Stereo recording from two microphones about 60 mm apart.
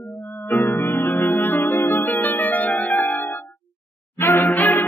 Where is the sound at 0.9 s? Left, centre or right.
Left.